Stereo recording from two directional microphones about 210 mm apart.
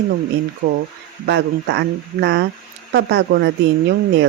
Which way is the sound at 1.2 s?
55° right (ahead or behind).